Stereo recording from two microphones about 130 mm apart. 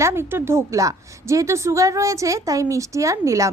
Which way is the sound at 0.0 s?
20° right (ahead or behind).